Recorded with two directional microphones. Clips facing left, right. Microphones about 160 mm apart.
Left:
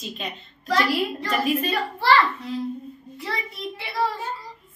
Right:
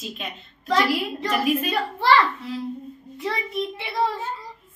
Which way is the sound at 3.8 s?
20° right (ahead or behind).